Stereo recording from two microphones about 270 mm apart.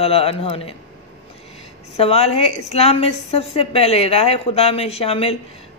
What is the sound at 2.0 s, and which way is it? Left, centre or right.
A woman's voice, left.